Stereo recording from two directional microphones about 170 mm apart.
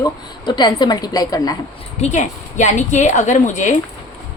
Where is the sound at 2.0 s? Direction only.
45° left (ahead or behind).